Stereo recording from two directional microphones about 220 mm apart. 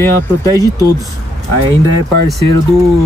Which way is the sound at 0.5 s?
15° right (ahead or behind).